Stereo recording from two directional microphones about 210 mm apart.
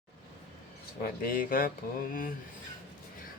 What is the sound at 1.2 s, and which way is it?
Speech, 40° left (ahead or behind).